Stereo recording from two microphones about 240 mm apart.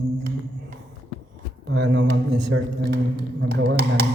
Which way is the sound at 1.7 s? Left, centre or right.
Right.